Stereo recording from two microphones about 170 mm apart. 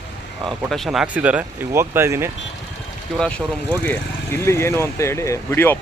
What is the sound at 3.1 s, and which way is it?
Speech, 5° left (ahead or behind).